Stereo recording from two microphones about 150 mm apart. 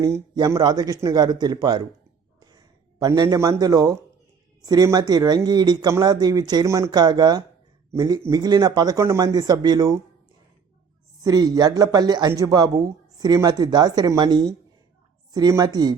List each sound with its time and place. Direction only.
0.0 s speech: 25° right (ahead or behind)
3.0 s speech: 20° right (ahead or behind)
11.2 s speech: 25° right (ahead or behind)